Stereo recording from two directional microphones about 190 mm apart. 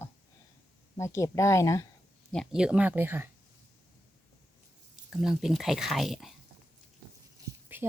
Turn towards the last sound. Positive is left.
turn(degrees=-10)  # may be behind; listen again after turning